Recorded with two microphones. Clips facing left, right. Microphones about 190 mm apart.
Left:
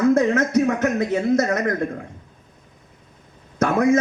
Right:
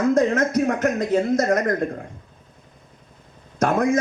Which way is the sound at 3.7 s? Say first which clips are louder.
Left 2 dB; 55° right (ahead or behind).